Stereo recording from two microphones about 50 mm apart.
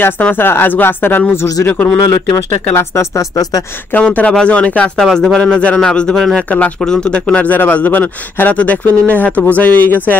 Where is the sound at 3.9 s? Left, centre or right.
Left.